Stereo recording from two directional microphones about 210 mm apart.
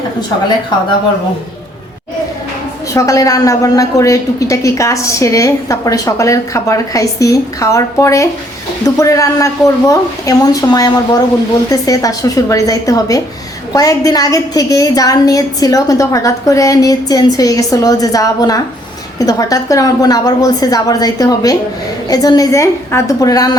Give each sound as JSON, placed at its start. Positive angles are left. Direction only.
{"t": 2.9, "sound": "a woman's voice", "side_deg": 15}